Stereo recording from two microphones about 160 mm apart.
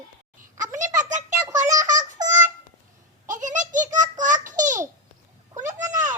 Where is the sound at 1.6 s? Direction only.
20° right (ahead or behind).